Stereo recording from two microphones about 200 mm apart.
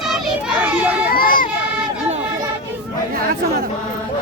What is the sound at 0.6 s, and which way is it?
Children playing, 10° right (ahead or behind).